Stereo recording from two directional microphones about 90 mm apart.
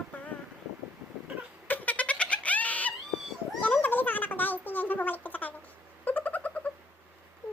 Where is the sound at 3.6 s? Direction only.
20° left (ahead or behind).